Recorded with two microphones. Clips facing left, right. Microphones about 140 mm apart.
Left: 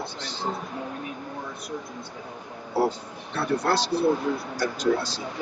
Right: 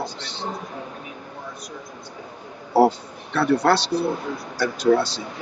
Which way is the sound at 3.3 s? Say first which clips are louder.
Right 6 dB; 75° right (ahead or behind).